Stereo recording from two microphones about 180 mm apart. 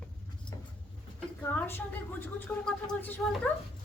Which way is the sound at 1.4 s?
10° left (ahead or behind).